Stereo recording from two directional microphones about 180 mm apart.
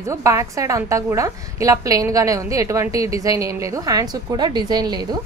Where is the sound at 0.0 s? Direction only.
15° right (ahead or behind).